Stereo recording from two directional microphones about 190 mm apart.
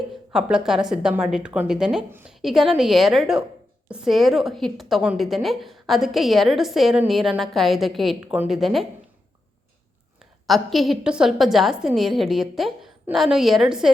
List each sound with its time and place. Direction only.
0.3 s a woman's voice: 5° right (ahead or behind)
10.4 s a woman's voice: centre (ahead or behind)